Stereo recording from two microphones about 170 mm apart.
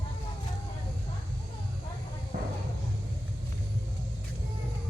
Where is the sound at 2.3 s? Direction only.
60° right (ahead or behind).